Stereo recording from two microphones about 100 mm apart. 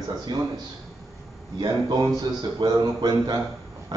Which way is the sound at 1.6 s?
45° right (ahead or behind).